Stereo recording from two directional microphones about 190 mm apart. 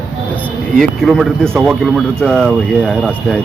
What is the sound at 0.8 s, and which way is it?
Speech, centre (ahead or behind).